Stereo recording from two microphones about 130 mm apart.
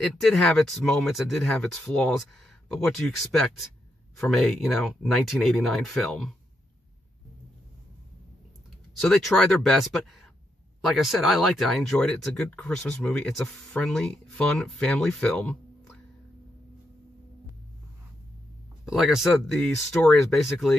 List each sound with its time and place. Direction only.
0.0 s speech: 5° left (ahead or behind)
4.2 s speech: centre (ahead or behind)
9.1 s speech: 5° left (ahead or behind)
18.9 s speech: centre (ahead or behind)